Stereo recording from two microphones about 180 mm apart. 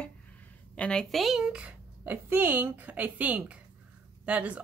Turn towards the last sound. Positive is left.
turn(degrees=-5)  # may be behind; listen again after turning